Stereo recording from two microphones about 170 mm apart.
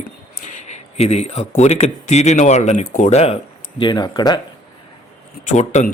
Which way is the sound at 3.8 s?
25° left (ahead or behind).